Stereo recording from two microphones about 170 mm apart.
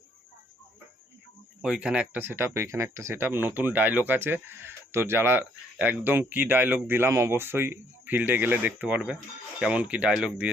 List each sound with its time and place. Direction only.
1.6 s speech: 5° right (ahead or behind)